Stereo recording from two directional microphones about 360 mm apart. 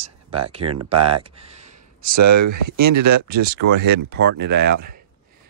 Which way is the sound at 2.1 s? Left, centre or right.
Right.